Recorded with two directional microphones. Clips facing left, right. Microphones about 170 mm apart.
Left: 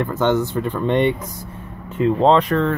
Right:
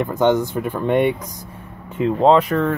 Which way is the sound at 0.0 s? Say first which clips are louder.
Right 2 dB; 15° right (ahead or behind).